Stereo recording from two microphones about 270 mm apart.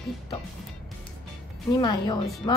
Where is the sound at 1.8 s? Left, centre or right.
Centre.